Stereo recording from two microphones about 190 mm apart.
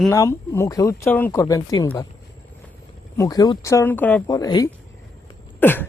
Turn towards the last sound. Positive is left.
turn(degrees=10)  # may be behind; listen again after turning